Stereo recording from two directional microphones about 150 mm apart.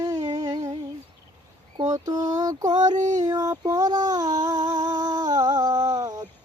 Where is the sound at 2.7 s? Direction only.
55° right (ahead or behind).